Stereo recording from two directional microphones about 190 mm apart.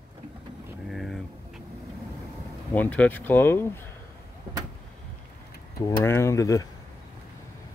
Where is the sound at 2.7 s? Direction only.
10° left (ahead or behind).